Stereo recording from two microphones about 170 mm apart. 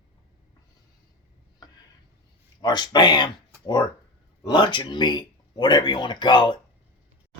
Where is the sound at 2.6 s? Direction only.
25° left (ahead or behind).